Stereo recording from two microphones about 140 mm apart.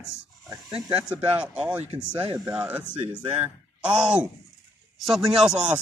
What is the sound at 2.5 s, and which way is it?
Speech, 10° right (ahead or behind).